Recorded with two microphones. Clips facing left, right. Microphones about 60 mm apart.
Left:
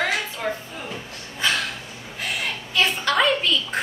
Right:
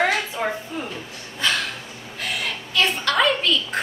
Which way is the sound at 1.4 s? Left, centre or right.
Centre.